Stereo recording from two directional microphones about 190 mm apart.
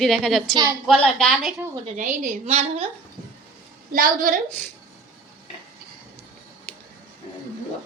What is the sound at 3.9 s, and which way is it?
Speech, 45° right (ahead or behind).